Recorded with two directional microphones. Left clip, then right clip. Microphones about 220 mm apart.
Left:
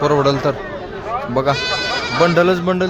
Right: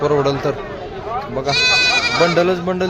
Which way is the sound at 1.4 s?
25° left (ahead or behind).